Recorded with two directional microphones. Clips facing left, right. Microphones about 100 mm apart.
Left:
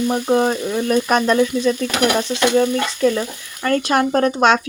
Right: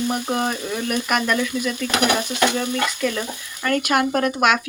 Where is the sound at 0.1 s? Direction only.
25° left (ahead or behind).